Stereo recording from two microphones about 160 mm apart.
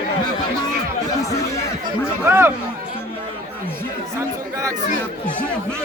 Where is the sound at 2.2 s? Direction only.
15° right (ahead or behind).